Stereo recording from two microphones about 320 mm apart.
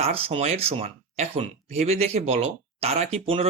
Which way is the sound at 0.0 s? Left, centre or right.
Centre.